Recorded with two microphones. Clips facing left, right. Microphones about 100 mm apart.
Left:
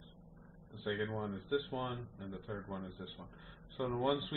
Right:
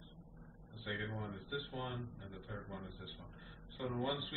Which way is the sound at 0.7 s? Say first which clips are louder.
Left 6 dB; 45° left (ahead or behind).